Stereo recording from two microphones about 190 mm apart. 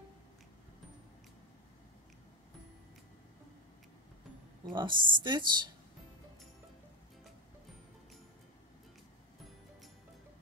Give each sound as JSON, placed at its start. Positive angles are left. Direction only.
{"t": 4.7, "sound": "speech", "side_deg": -25}